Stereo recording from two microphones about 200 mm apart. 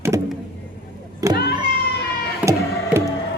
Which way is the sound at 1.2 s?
15° right (ahead or behind).